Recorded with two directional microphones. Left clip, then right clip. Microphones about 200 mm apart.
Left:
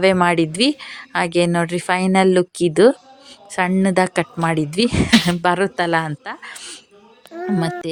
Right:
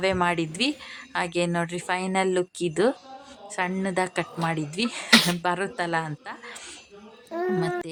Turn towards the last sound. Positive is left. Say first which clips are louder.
# left 3 dB
turn(degrees=40)  # may be behind; listen again after turning